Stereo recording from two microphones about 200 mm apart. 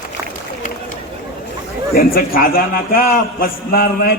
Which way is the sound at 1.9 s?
45° left (ahead or behind).